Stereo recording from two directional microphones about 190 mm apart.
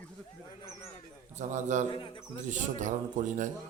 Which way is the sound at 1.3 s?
40° right (ahead or behind).